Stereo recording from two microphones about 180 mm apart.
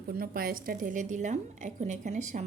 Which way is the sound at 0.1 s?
55° right (ahead or behind).